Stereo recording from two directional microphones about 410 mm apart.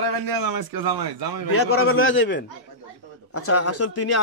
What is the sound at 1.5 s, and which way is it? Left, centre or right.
A man's voice, left.